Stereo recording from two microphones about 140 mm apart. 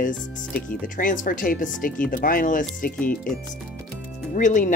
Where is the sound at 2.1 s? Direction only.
85° left.